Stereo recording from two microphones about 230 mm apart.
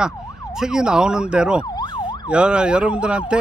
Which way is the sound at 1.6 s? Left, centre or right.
Centre.